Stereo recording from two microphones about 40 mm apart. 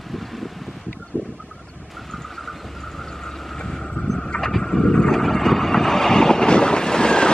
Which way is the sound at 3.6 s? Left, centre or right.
Centre.